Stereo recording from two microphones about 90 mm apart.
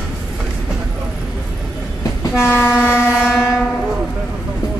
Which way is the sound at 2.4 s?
25° left (ahead or behind).